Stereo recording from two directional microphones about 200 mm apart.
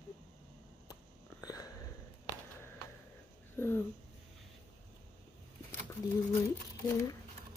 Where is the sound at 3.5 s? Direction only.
10° left (ahead or behind).